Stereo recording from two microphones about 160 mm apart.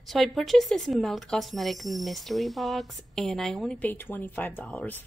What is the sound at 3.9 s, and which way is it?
Speech, 15° left (ahead or behind).